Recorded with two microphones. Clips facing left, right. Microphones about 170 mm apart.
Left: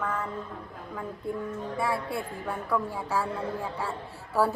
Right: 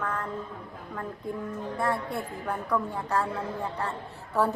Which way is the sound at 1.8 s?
Centre (ahead or behind).